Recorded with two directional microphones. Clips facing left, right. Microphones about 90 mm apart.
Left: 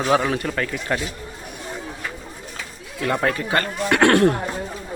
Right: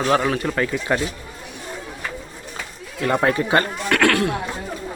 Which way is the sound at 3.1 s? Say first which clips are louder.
Right 3 dB; 20° right (ahead or behind).